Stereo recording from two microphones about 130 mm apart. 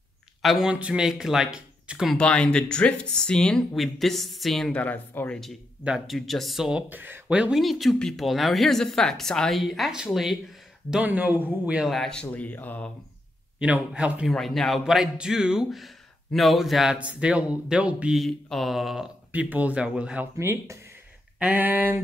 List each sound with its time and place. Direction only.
0.4 s speech: centre (ahead or behind)
2.1 s speech: 10° left (ahead or behind)
5.9 s speech: centre (ahead or behind)
6.9 s speech: 15° right (ahead or behind)
11.9 s speech: 5° left (ahead or behind)
13.6 s speech: 10° right (ahead or behind)
14.3 s speech: 5° left (ahead or behind)
20.3 s speech: 20° right (ahead or behind)